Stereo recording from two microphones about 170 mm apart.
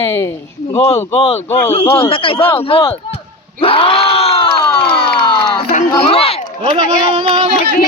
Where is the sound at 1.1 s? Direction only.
35° left (ahead or behind).